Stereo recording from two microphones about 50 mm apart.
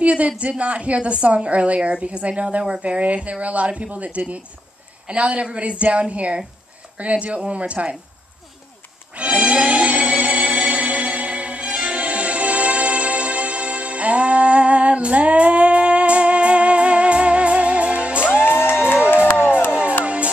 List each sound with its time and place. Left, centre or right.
0.0 s a sound: right
0.4 s a woman's voice: right
9.1 s music: right
19.3 s music: left
19.7 s music: right